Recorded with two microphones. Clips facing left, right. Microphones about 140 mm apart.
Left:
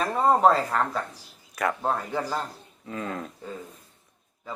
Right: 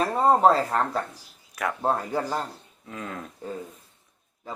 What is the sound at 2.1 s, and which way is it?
Speech, 10° right (ahead or behind).